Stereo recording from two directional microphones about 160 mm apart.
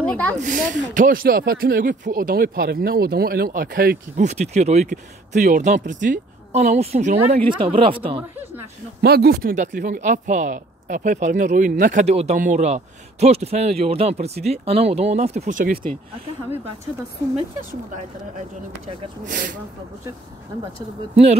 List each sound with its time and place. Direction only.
0.0 s speech: 10° left (ahead or behind)
0.4 s speech: 55° right (ahead or behind); by 4.0 s 70° right (ahead or behind)
4.2 s speech: 45° right (ahead or behind)
7.4 s speech: 35° right (ahead or behind)
9.0 s speech: 80° right; by 15.9 s 60° right (ahead or behind)
19.2 s speech: 55° right (ahead or behind)
21.1 s speech: 40° right (ahead or behind)